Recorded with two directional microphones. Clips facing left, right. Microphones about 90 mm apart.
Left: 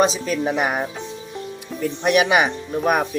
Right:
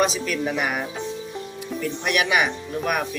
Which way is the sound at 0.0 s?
25° left (ahead or behind).